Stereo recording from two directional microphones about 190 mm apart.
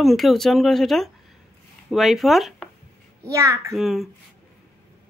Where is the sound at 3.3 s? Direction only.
15° right (ahead or behind).